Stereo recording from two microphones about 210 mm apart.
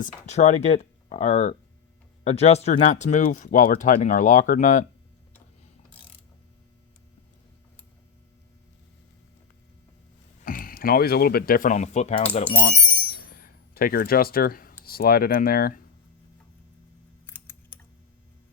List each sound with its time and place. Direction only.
0.3 s speech: 35° left (ahead or behind)
10.4 s speech: 40° left (ahead or behind)
13.3 s a sound: 45° left (ahead or behind)
14.8 s speech: 45° left (ahead or behind)
17.2 s typing: 10° left (ahead or behind)